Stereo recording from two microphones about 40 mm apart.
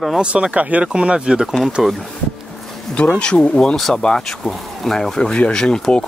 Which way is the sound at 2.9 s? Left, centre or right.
Left.